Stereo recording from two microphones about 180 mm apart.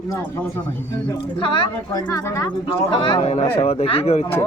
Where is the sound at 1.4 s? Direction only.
30° left (ahead or behind).